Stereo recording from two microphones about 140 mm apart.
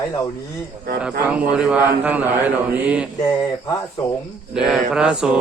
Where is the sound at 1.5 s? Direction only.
5° right (ahead or behind).